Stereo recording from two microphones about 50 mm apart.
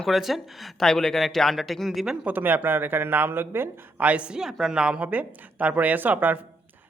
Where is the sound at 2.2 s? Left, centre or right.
Right.